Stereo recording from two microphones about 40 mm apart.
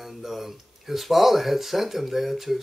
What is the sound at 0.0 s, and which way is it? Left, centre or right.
Speech, centre.